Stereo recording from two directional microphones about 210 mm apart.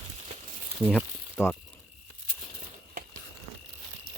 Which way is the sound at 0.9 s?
5° left (ahead or behind).